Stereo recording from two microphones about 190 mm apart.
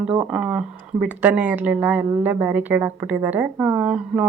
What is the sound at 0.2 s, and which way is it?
Speech, 5° right (ahead or behind).